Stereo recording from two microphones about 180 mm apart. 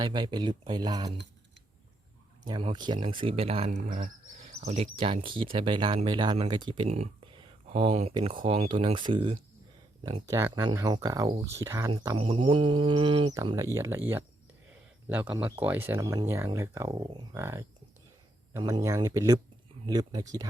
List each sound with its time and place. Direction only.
0.0 s speech: 25° right (ahead or behind)
2.4 s speech: 20° right (ahead or behind)
6.9 s speech: 40° right (ahead or behind); by 11.9 s 15° right (ahead or behind)
11.9 s speech: 25° right (ahead or behind)